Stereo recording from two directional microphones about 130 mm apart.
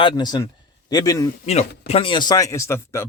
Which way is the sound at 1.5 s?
55° left (ahead or behind).